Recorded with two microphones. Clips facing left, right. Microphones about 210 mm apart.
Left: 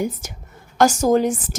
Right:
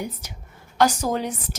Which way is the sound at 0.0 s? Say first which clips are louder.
Left 7 dB; 45° left (ahead or behind).